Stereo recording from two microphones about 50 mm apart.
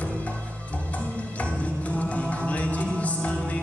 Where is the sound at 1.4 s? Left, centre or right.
Left.